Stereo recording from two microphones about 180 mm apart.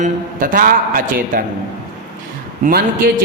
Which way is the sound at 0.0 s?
50° right (ahead or behind).